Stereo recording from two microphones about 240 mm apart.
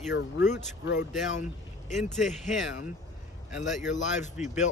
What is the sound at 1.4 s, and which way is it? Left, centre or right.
Speech, left.